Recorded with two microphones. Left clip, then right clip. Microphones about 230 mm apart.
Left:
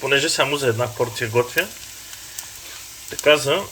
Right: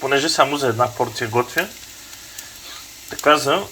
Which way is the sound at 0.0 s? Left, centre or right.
Left.